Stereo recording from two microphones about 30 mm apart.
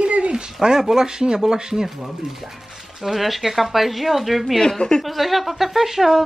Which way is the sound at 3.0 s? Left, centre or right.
Centre.